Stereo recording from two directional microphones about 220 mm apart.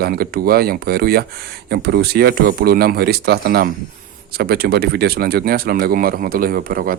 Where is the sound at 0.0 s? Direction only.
45° right (ahead or behind).